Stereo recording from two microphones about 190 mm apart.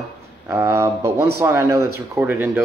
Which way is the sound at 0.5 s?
15° right (ahead or behind).